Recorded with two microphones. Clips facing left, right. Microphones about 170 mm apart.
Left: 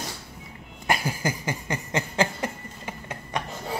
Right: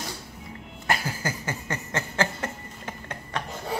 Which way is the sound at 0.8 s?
15° left (ahead or behind).